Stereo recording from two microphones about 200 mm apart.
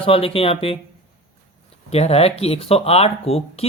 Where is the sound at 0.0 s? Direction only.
30° left (ahead or behind).